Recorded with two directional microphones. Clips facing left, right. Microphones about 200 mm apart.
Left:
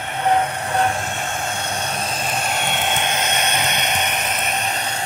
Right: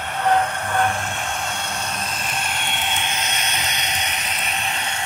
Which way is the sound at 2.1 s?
45° left (ahead or behind).